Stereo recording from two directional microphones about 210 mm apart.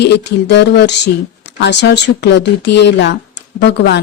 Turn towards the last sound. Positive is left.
turn(degrees=55)  # may be behind; listen again after turning